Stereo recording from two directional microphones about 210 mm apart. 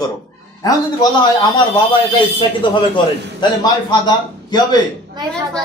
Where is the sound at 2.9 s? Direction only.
20° left (ahead or behind).